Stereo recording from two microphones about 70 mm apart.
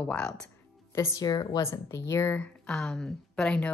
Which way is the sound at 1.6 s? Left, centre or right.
Left.